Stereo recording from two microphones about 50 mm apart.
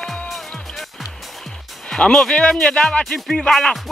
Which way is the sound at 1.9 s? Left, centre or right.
Centre.